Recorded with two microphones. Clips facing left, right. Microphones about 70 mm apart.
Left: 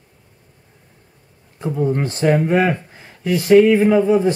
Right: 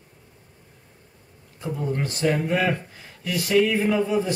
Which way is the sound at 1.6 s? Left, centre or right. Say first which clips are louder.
Left 8 dB; left.